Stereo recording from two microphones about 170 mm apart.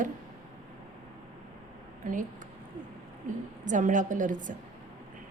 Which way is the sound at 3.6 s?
50° right (ahead or behind).